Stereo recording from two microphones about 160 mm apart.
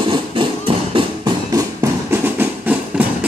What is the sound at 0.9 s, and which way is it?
Music, 30° right (ahead or behind).